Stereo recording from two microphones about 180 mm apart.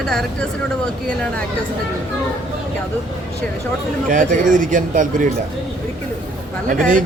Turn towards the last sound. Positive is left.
turn(degrees=-45)  # may be behind; listen again after turning